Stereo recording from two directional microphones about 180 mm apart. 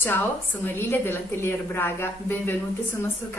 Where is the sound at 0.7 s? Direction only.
10° left (ahead or behind).